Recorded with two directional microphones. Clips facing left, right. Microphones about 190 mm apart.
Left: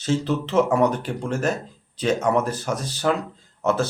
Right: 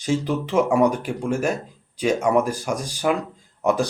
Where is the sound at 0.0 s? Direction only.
10° right (ahead or behind).